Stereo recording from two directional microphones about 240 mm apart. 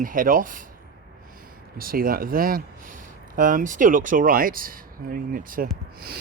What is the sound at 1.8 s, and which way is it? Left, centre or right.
Speech, right.